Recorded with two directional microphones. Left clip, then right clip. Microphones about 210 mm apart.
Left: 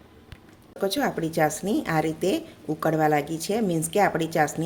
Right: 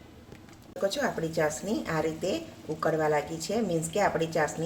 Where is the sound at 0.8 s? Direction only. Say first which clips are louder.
Left 3 dB; 45° left (ahead or behind).